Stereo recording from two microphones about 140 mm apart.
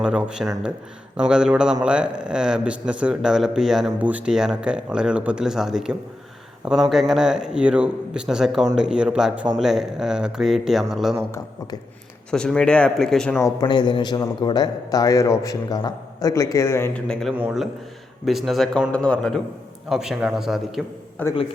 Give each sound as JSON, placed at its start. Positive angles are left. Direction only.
{"t": 0.0, "sound": "a man's voice", "side_deg": -5}
{"t": 12.3, "sound": "a man's voice", "side_deg": 5}
{"t": 13.4, "sound": "a man's voice", "side_deg": 30}
{"t": 17.1, "sound": "a man's voice", "side_deg": 5}
{"t": 21.2, "sound": "a man's voice", "side_deg": 10}